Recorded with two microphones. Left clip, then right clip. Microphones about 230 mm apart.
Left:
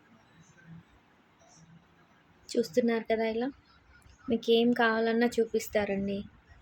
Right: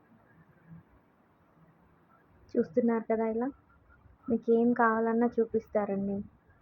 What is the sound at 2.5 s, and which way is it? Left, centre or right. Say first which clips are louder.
A woman's voice: left 1 dB; left.